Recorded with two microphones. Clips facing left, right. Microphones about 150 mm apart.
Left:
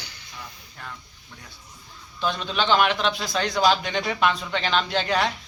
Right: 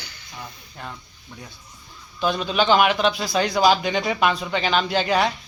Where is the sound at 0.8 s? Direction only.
20° right (ahead or behind).